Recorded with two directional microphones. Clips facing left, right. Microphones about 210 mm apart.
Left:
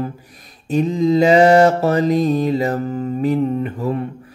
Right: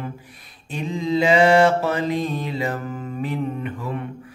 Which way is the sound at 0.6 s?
40° left (ahead or behind).